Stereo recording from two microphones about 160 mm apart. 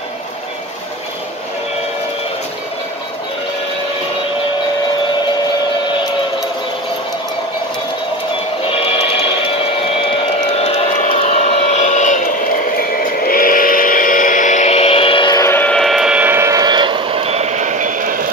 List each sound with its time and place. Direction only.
10.5 s vehicle: 40° left (ahead or behind)
15.4 s train: 10° left (ahead or behind); by 18.2 s 55° right (ahead or behind)